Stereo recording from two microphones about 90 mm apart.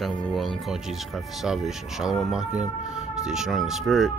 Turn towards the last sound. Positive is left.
turn(degrees=0)  # may be behind; listen again after turning